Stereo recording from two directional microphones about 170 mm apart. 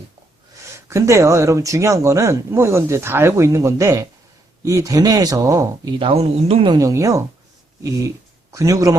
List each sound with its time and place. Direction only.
0.5 s speech: 15° right (ahead or behind); by 6.7 s 35° right (ahead or behind)
6.7 s speech: 20° right (ahead or behind)